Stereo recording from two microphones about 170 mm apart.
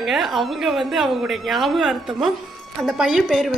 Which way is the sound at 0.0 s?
Centre (ahead or behind).